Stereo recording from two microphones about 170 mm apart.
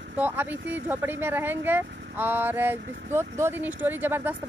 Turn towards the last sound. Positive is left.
turn(degrees=-10)  # may be behind; listen again after turning